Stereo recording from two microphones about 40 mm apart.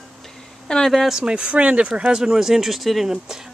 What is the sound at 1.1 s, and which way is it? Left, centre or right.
Speech, right.